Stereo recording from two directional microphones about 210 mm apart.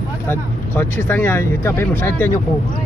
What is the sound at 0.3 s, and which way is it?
Speech, 10° left (ahead or behind).